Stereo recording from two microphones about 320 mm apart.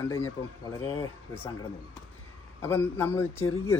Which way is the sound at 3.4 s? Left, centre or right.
Left.